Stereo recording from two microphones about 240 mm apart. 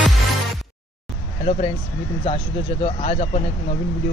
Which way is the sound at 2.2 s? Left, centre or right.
Left.